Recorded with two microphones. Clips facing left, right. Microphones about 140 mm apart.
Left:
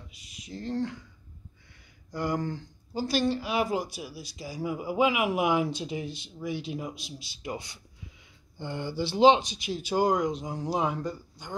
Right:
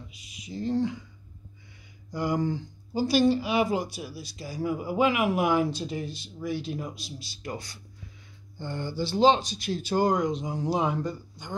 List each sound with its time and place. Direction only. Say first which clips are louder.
0.1 s speech: right 2 dB; 5° right (ahead or behind)
2.1 s speech: right 3 dB; 5° right (ahead or behind)